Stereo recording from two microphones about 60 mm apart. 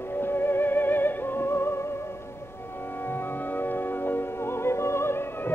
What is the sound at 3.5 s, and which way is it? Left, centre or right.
Music, left.